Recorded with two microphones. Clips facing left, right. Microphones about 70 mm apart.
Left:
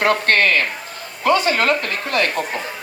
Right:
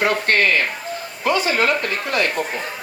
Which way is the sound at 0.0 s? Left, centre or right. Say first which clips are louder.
Left 2 dB; left.